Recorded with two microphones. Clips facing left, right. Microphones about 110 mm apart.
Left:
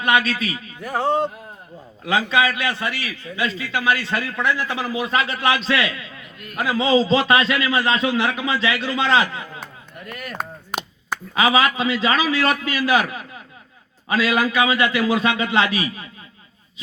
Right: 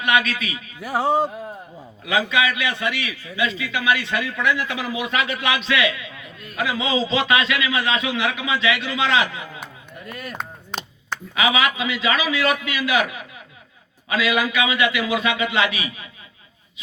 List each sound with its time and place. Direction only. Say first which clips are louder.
0.0 s a man's voice: left 1 dB; 35° left (ahead or behind)
0.8 s music: right 1 dB; 5° right (ahead or behind)
2.0 s a man's voice: left 2 dB; 35° left (ahead or behind)
6.1 s a sound: even; 25° right (ahead or behind)
6.6 s a man's voice: left 4 dB; 35° left (ahead or behind)
10.1 s speech: even; 25° right (ahead or behind)
10.3 s chopping: left 3 dB; 10° left (ahead or behind)
11.3 s a man's voice: left 3 dB; 35° left (ahead or behind)